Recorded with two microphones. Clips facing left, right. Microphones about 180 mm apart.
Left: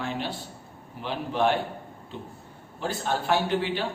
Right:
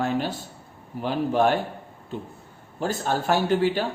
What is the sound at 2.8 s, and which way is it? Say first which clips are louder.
Speech: right 3 dB; 45° right (ahead or behind).